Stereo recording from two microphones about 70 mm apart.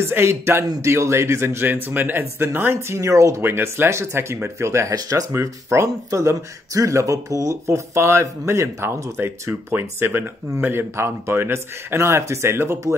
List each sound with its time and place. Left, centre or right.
0.0 s speech: right
9.7 s speech: right